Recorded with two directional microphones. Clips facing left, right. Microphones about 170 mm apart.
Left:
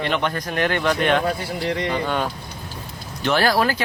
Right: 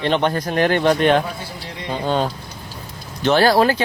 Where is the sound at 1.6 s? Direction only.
75° left (ahead or behind).